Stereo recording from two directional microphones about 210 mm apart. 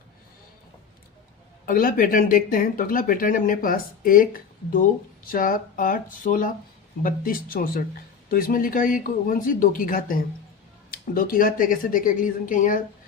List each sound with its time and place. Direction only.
1.6 s speech: 40° left (ahead or behind)